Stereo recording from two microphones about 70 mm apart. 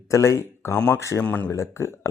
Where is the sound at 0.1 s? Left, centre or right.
Left.